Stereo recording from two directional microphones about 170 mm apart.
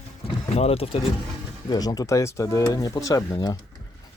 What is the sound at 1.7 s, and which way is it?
Speech, 20° left (ahead or behind).